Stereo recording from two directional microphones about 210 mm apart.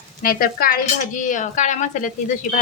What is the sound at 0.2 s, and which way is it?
A woman's voice, 45° left (ahead or behind).